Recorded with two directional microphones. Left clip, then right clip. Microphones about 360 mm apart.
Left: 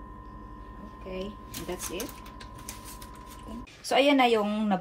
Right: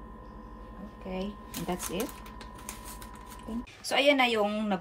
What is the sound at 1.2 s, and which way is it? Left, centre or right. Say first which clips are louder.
Speech: even; right.